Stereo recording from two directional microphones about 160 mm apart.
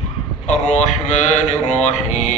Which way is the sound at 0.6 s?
45° left (ahead or behind).